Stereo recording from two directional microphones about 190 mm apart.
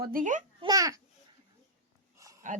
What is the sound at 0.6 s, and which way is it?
Speech, 20° right (ahead or behind).